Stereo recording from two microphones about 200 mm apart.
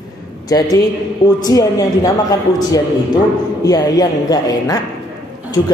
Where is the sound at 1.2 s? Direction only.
20° left (ahead or behind).